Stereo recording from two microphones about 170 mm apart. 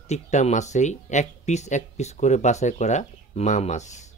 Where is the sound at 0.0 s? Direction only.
40° left (ahead or behind).